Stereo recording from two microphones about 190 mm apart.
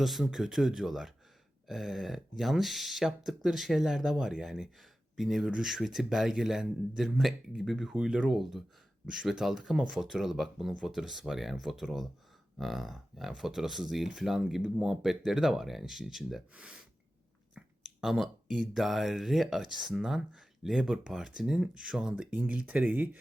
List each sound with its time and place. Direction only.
0.0 s speech: centre (ahead or behind)